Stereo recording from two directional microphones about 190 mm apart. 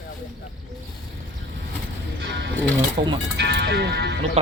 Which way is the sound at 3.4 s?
60° right (ahead or behind).